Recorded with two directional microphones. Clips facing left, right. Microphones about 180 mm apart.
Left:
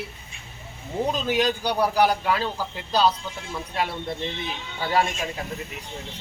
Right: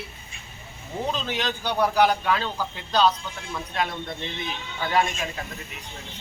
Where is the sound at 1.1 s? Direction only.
10° left (ahead or behind).